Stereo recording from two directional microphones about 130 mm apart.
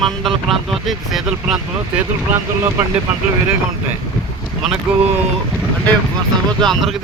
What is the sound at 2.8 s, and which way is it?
Speech, 15° right (ahead or behind).